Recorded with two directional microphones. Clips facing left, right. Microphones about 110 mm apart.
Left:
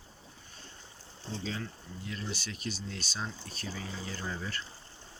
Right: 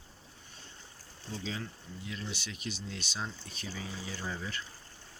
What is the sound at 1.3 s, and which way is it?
Speech, 25° left (ahead or behind).